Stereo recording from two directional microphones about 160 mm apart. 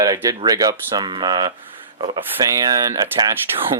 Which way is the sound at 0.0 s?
20° right (ahead or behind).